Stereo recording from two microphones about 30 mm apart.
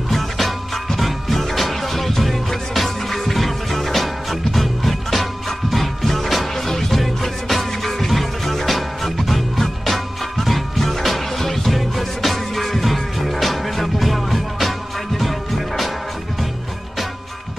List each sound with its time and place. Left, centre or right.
0.9 s music: centre
6.7 s music: centre
7.0 s music: centre